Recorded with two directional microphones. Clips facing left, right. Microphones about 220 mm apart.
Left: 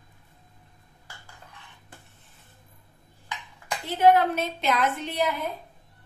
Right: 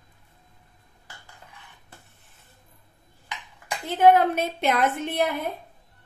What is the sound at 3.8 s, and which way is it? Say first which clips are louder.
A woman's voice: right 2 dB; 50° right (ahead or behind).